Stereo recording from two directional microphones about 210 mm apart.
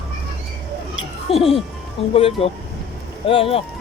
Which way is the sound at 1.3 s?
25° left (ahead or behind).